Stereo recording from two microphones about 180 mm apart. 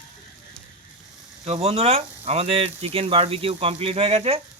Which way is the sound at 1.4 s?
35° right (ahead or behind).